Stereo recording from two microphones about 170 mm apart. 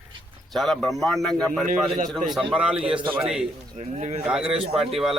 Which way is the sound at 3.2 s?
5° right (ahead or behind).